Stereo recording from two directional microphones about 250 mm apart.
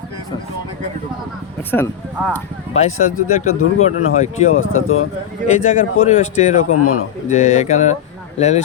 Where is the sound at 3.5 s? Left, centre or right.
Left.